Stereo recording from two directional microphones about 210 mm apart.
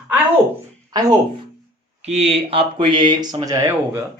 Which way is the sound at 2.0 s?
30° right (ahead or behind).